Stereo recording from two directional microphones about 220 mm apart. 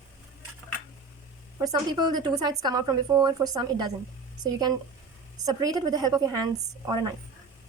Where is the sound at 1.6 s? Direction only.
20° right (ahead or behind).